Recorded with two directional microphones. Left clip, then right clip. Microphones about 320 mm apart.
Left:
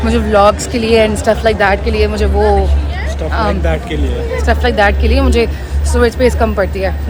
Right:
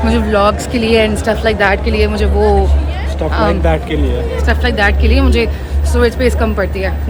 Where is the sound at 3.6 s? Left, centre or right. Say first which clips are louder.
Right 2 dB; centre.